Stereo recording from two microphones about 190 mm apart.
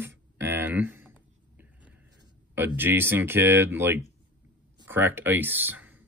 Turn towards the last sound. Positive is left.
turn(degrees=-10)  # may be behind; listen again after turning